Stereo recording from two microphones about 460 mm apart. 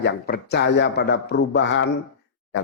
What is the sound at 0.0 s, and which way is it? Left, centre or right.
A man's voice, left.